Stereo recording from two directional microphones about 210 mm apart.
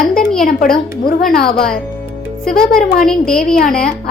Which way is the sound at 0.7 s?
45° left (ahead or behind).